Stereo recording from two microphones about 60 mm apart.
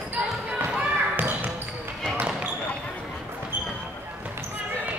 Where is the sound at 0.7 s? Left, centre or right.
Right.